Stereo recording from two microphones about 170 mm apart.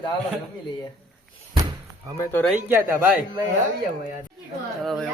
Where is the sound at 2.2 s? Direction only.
10° left (ahead or behind).